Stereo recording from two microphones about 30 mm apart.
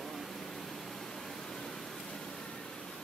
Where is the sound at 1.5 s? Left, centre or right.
Centre.